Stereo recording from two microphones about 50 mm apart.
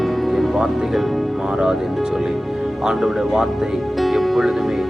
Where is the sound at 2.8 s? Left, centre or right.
Centre.